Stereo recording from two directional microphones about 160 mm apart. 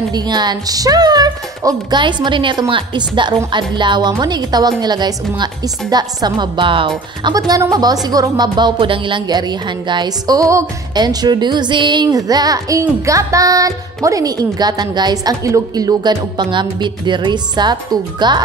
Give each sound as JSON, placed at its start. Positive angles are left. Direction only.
{"t": 0.1, "sound": "speech", "side_deg": -25}